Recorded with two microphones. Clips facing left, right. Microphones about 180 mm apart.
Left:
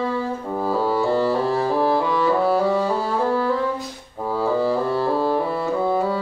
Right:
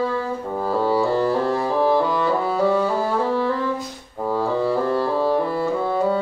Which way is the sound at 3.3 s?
Centre (ahead or behind).